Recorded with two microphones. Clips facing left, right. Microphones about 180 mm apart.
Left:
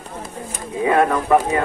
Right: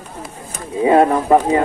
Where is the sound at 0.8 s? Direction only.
25° right (ahead or behind).